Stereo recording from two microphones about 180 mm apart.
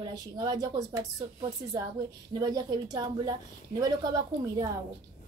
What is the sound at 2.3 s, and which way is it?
A woman's voice, 20° right (ahead or behind).